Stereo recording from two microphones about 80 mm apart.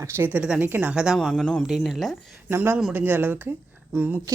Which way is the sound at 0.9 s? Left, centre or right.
Centre.